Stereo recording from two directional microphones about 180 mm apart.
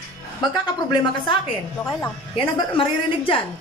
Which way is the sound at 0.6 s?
25° left (ahead or behind).